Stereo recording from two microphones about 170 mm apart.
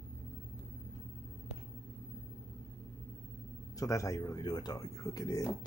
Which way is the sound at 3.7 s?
20° left (ahead or behind).